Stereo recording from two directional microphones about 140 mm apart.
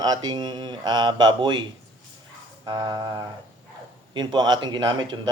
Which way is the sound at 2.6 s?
30° right (ahead or behind).